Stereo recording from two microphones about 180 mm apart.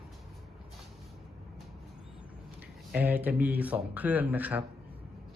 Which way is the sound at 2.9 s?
10° right (ahead or behind).